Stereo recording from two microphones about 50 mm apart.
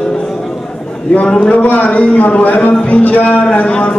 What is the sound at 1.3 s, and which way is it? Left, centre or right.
A man's voice, left.